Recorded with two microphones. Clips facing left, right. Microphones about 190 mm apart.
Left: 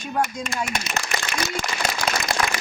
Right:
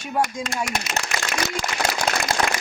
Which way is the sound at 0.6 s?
90° right.